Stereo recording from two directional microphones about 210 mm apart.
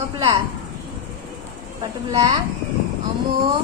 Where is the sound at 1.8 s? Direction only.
15° right (ahead or behind).